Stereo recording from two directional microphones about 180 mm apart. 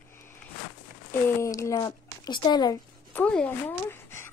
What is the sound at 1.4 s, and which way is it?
Speech, 20° left (ahead or behind).